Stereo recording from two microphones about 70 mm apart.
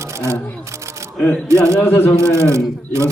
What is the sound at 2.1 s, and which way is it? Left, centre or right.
Speech, right.